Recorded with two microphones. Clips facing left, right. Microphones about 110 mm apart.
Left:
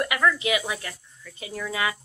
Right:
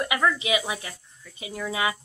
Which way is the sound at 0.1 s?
20° right (ahead or behind).